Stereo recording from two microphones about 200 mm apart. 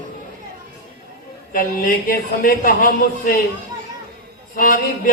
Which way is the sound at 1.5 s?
45° left (ahead or behind).